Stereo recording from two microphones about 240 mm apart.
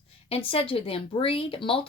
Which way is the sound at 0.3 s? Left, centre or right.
Left.